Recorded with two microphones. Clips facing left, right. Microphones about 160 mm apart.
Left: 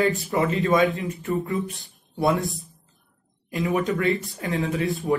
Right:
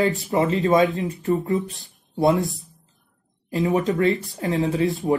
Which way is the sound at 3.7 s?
20° right (ahead or behind).